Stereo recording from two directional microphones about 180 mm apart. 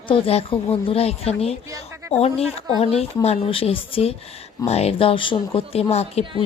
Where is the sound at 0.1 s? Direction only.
30° left (ahead or behind).